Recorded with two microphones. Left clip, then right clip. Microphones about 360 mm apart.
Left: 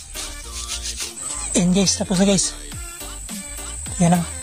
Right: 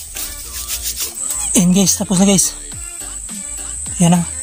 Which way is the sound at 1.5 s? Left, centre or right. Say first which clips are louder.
Right 4 dB; left.